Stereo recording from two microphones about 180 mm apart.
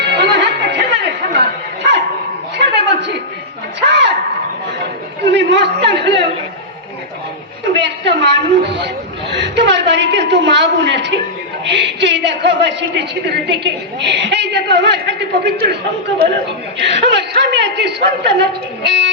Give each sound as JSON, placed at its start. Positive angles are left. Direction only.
{"t": 0.0, "sound": "music", "side_deg": -70}
{"t": 1.8, "sound": "dog", "side_deg": -80}
{"t": 2.6, "sound": "chuckle", "side_deg": -70}
{"t": 3.8, "sound": "a sound", "side_deg": -75}
{"t": 5.2, "sound": "a man's voice", "side_deg": -75}
{"t": 7.8, "sound": "a man's voice", "side_deg": -75}
{"t": 16.8, "sound": "a man's voice", "side_deg": -75}